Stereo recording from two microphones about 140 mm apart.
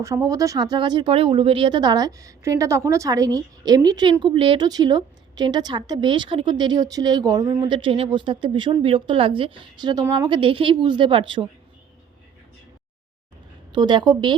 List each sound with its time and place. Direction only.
0.0 s a woman's voice: 25° right (ahead or behind)
13.7 s a woman's voice: 30° right (ahead or behind)